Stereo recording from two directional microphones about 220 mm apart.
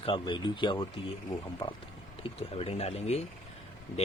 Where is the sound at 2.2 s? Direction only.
25° left (ahead or behind).